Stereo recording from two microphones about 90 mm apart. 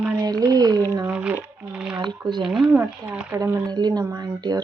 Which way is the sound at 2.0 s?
55° right (ahead or behind).